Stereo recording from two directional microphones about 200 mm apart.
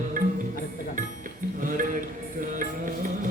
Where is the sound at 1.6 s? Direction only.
45° right (ahead or behind).